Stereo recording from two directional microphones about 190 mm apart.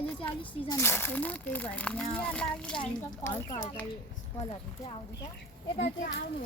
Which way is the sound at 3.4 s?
15° left (ahead or behind).